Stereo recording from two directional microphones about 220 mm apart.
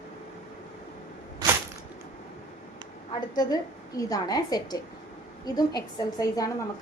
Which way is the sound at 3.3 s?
15° left (ahead or behind).